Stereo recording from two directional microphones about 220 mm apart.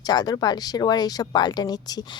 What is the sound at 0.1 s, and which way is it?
Speech, 20° left (ahead or behind).